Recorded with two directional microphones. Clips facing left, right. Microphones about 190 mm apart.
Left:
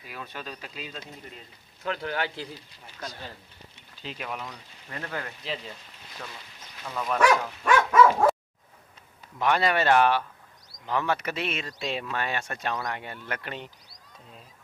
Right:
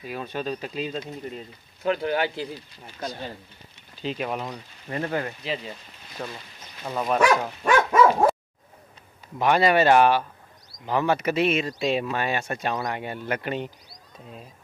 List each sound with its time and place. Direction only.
0.0 s speech: 30° right (ahead or behind)
1.9 s speech: 15° right (ahead or behind)
3.0 s speech: 25° right (ahead or behind)
7.4 s dog: 25° right (ahead or behind)
9.4 s speech: 15° right (ahead or behind)